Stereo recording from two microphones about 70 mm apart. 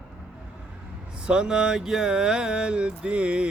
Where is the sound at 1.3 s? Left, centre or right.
Centre.